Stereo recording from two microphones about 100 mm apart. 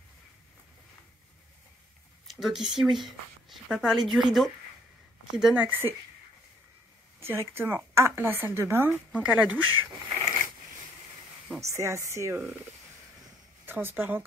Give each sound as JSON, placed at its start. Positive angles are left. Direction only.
{"t": 2.2, "sound": "speech", "side_deg": -5}
{"t": 5.4, "sound": "speech", "side_deg": -15}
{"t": 7.2, "sound": "a woman's voice", "side_deg": -25}
{"t": 11.6, "sound": "a woman's voice", "side_deg": -30}
{"t": 13.7, "sound": "a woman's voice", "side_deg": -20}